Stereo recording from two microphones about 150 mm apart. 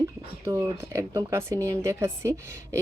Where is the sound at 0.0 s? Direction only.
20° right (ahead or behind).